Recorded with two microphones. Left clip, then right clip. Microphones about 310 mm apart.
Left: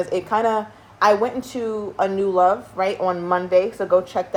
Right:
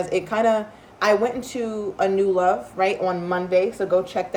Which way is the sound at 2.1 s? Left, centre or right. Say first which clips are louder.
Left 3 dB; centre.